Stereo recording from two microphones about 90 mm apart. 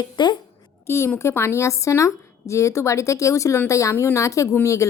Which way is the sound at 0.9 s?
30° left (ahead or behind).